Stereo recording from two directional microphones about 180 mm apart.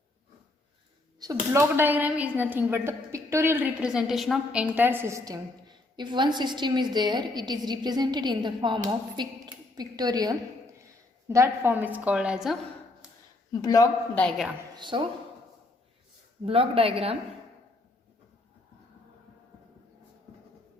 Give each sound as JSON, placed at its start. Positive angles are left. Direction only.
{"t": 1.2, "sound": "a woman's voice", "side_deg": -15}
{"t": 13.5, "sound": "a man's voice", "side_deg": 20}
{"t": 14.2, "sound": "a woman's voice", "side_deg": 0}
{"t": 14.8, "sound": "a woman's voice", "side_deg": -25}
{"t": 16.5, "sound": "a woman's voice", "side_deg": -30}